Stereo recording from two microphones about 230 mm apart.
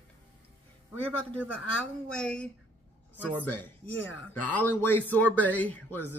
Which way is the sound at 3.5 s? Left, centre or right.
Centre.